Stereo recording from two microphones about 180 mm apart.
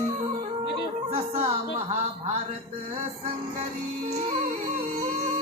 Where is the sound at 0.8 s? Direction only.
30° right (ahead or behind).